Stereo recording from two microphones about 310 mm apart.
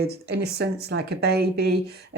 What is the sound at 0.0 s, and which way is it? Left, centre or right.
Speech, right.